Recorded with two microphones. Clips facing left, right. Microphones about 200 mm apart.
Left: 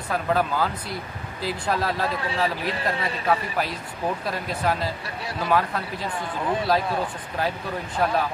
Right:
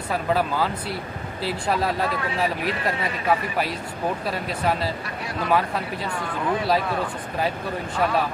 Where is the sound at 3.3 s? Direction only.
5° right (ahead or behind).